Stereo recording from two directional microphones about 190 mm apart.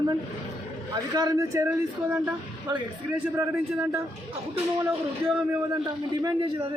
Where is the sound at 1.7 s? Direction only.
10° right (ahead or behind).